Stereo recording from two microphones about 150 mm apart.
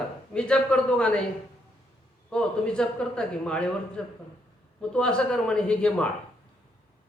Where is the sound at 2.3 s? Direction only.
5° left (ahead or behind).